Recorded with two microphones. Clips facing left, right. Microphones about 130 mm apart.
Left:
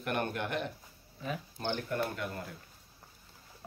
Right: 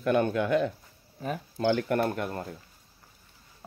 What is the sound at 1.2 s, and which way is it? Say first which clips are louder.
Speech: right 5 dB; 45° right (ahead or behind).